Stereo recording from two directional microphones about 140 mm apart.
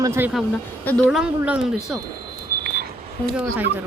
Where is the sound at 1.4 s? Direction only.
10° right (ahead or behind).